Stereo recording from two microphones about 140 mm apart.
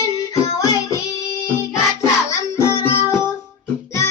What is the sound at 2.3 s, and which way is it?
Music, 20° left (ahead or behind).